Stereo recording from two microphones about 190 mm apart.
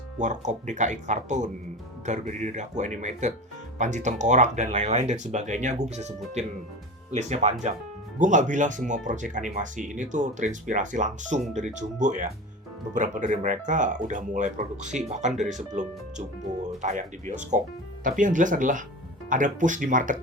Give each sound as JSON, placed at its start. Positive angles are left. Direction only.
{"t": 0.2, "sound": "speech", "side_deg": -40}